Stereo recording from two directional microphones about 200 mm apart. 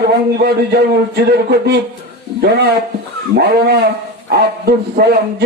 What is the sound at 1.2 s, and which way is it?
Music, 55° right (ahead or behind).